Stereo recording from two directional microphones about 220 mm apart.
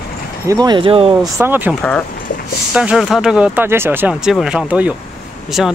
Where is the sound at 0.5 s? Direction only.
20° right (ahead or behind).